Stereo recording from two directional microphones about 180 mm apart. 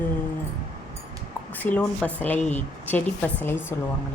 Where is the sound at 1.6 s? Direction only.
10° left (ahead or behind).